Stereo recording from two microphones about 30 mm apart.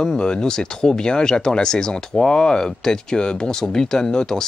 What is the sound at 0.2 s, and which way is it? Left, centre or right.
Speech, left.